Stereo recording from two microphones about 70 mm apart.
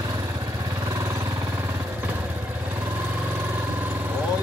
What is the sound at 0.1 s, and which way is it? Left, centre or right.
Vehicle, right.